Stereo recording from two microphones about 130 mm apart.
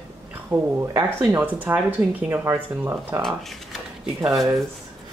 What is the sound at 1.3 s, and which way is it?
Speech, 15° right (ahead or behind).